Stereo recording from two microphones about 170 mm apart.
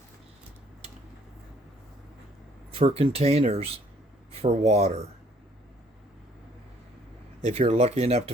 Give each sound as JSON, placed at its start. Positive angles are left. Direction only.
{"t": 2.7, "sound": "speech", "side_deg": -35}
{"t": 7.4, "sound": "speech", "side_deg": -35}